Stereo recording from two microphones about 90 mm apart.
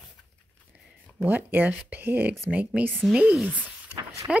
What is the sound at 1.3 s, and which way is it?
A woman's voice, 20° right (ahead or behind).